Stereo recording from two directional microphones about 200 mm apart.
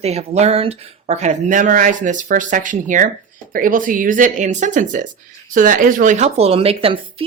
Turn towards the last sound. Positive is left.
turn(degrees=-30)  # may be behind; listen again after turning